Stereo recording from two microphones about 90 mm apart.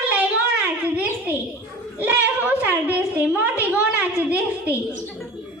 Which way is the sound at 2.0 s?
20° right (ahead or behind).